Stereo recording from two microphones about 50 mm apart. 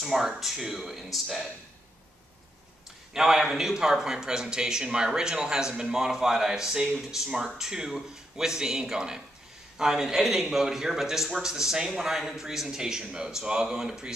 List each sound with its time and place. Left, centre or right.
0.0 s speech: centre
3.1 s speech: centre